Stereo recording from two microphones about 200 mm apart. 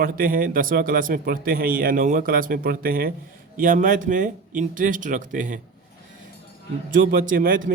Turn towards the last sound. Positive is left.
turn(degrees=-45)  # may be behind; listen again after turning